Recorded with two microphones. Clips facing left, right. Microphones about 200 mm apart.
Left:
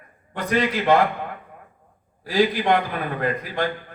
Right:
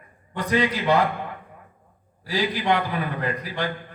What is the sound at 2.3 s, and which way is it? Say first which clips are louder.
Speech: left 4 dB; 50° left (ahead or behind).